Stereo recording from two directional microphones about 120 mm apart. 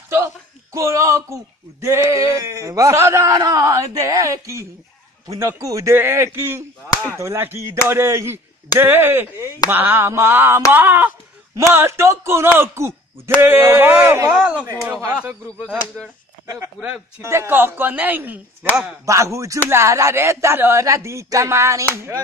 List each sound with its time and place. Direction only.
0.7 s a man's voice: 25° right (ahead or behind); by 14.7 s 10° right (ahead or behind)
14.7 s speech: 25° right (ahead or behind)
16.8 s a man's voice: 20° right (ahead or behind)